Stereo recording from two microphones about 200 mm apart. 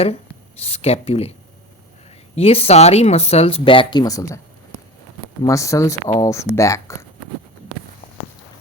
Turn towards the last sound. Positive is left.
turn(degrees=15)  # may be behind; listen again after turning